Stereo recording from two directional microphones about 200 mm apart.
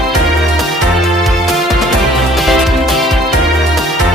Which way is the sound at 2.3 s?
Centre (ahead or behind).